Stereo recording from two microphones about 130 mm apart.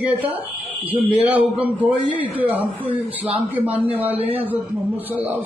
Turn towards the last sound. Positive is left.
turn(degrees=-15)  # may be behind; listen again after turning